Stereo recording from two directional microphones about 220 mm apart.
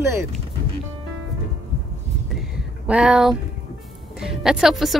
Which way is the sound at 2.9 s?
5° right (ahead or behind).